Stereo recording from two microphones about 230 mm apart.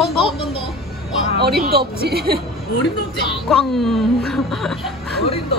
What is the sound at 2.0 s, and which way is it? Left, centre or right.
Speech, right.